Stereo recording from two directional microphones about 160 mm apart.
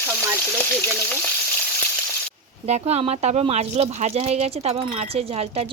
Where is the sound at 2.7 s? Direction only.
40° right (ahead or behind).